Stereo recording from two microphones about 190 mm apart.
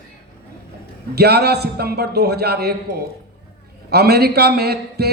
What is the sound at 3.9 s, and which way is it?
Speech, 55° right (ahead or behind).